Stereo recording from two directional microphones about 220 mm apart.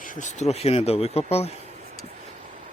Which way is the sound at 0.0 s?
35° left (ahead or behind).